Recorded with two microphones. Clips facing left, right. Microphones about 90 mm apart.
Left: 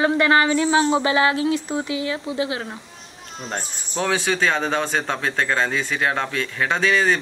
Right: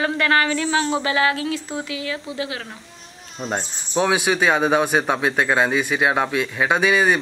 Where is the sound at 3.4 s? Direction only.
15° right (ahead or behind).